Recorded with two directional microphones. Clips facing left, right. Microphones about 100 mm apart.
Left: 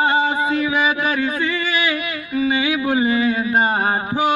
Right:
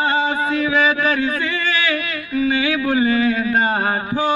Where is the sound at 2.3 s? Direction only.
20° left (ahead or behind).